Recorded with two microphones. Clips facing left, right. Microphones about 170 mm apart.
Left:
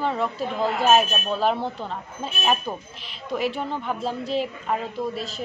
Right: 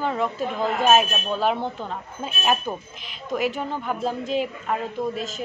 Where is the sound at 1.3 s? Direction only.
Centre (ahead or behind).